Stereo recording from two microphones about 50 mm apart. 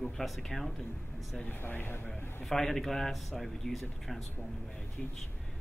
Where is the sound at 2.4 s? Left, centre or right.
Centre.